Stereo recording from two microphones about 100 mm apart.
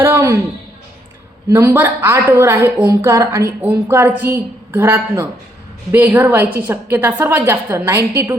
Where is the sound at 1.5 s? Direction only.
25° right (ahead or behind).